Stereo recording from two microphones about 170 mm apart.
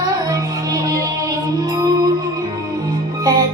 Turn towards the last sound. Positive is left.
turn(degrees=-20)  # may be behind; listen again after turning